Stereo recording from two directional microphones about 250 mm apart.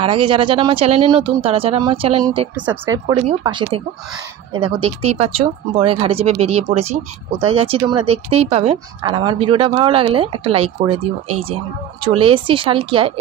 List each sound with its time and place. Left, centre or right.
0.0 s speech: centre
2.5 s speech: centre